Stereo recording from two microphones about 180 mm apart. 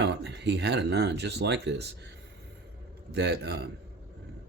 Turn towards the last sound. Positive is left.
turn(degrees=-70)  # may be behind; listen again after turning